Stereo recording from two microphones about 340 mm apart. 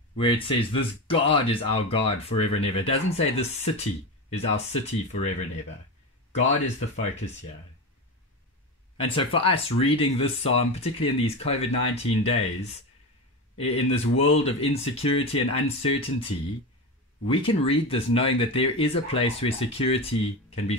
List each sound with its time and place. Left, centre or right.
0.1 s speech: centre
8.9 s speech: centre